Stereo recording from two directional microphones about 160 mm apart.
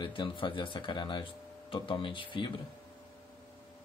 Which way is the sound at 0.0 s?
30° left (ahead or behind).